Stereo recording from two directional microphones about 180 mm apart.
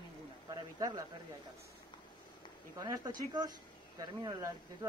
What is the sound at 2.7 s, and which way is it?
Speech, 20° right (ahead or behind).